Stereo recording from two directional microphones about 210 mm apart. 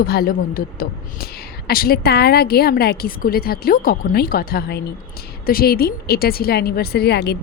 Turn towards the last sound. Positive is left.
turn(degrees=50)  # may be behind; listen again after turning